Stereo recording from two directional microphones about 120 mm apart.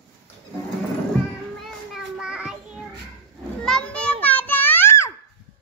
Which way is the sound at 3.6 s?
5° left (ahead or behind).